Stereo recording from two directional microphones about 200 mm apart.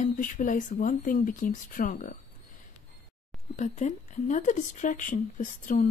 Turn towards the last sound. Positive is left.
turn(degrees=40)  # may be behind; listen again after turning